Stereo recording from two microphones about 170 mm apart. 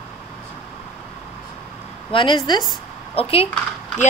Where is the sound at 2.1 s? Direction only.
30° left (ahead or behind).